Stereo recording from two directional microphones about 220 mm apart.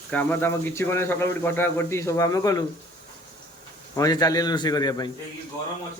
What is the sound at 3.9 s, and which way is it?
Speech, 15° left (ahead or behind).